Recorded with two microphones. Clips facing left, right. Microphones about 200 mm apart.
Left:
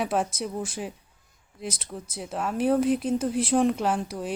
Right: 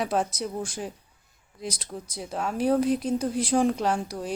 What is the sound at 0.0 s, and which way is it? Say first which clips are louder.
Speech: even; 5° left (ahead or behind).